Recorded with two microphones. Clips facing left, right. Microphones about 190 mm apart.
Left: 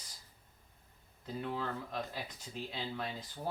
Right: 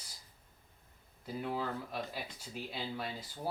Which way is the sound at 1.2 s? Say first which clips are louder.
Right 1 dB; 10° right (ahead or behind).